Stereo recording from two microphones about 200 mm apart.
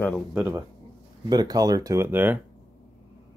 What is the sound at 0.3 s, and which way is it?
Speech, 10° right (ahead or behind).